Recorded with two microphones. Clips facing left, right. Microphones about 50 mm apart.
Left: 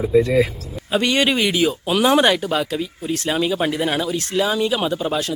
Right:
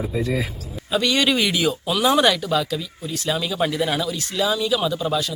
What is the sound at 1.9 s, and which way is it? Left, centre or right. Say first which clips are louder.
Speech: left 2 dB; left.